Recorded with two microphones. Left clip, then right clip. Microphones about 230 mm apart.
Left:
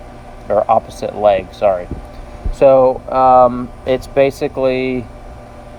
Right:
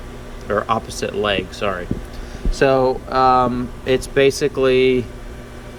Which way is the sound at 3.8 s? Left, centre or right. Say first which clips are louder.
Left 2 dB; centre.